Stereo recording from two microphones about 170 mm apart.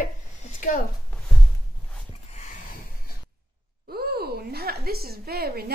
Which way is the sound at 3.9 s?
65° right (ahead or behind).